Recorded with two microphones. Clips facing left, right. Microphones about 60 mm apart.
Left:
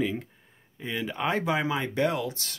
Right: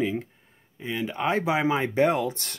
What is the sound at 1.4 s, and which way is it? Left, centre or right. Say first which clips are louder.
Speech: right 3 dB; right.